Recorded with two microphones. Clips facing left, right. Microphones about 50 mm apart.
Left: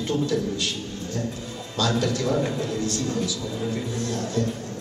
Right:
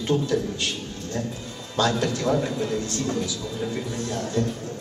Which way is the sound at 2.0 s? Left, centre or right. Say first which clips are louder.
Even; right.